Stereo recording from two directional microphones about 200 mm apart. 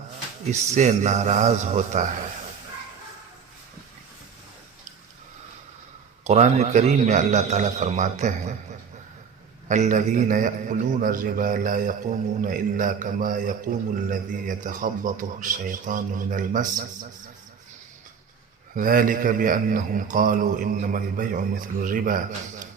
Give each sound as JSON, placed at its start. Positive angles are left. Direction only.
{"t": 0.7, "sound": "a man's voice", "side_deg": -35}
{"t": 6.2, "sound": "a man's voice", "side_deg": -35}
{"t": 9.6, "sound": "a man's voice", "side_deg": -40}
{"t": 18.8, "sound": "a man's voice", "side_deg": -45}